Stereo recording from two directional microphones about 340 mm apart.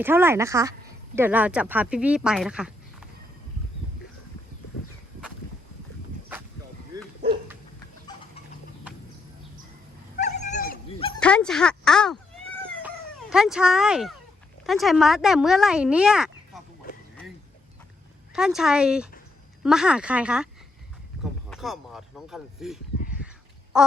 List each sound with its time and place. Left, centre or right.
0.0 s speech: centre
6.9 s dog: centre
10.2 s dog: left
11.2 s speech: centre
13.3 s speech: centre
18.3 s speech: centre
21.5 s speech: centre
23.7 s quack: centre